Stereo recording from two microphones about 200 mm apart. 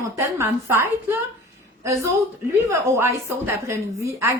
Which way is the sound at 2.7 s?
10° right (ahead or behind).